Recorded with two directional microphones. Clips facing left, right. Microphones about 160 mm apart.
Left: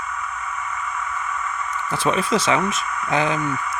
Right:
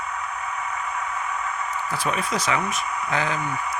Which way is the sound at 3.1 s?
20° left (ahead or behind).